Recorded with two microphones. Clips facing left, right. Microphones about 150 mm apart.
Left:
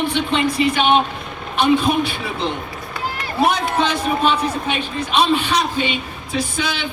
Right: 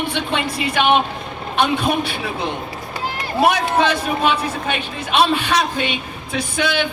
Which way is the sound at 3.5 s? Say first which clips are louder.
Right 2 dB; 60° right (ahead or behind).